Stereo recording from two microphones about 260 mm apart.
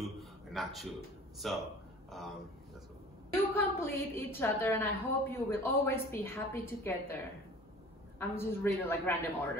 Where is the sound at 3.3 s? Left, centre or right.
Centre.